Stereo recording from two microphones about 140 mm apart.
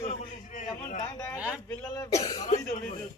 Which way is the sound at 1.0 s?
25° left (ahead or behind).